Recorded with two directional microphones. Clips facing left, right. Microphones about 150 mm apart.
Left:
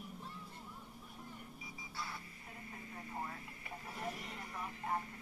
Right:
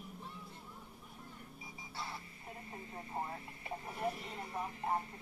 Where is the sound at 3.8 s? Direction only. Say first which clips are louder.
Right 4 dB; 30° right (ahead or behind).